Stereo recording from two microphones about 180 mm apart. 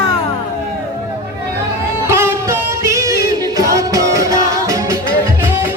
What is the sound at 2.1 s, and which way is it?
Music, 15° right (ahead or behind).